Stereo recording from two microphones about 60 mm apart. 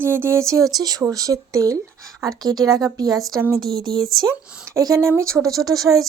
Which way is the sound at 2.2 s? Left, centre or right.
Right.